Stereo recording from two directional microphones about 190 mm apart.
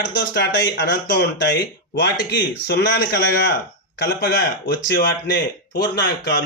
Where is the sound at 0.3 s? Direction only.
65° left (ahead or behind).